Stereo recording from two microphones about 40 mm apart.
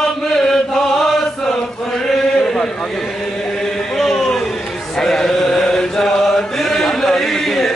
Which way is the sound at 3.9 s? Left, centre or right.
Centre.